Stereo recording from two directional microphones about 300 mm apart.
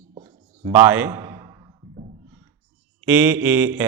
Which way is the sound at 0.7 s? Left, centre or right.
Centre.